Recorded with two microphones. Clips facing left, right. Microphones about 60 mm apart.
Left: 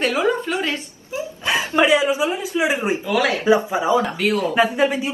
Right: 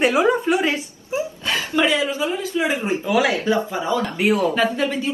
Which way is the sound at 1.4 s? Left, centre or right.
Centre.